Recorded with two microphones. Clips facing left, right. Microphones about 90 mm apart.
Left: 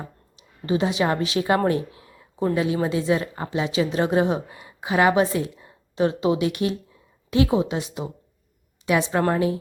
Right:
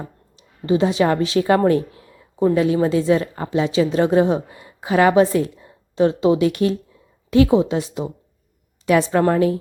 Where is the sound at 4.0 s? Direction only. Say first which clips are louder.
Right 5 dB; 25° left (ahead or behind).